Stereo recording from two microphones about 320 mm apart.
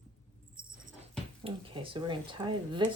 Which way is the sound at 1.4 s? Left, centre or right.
Centre.